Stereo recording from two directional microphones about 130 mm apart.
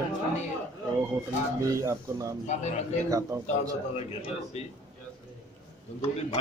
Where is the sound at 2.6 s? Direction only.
60° left (ahead or behind).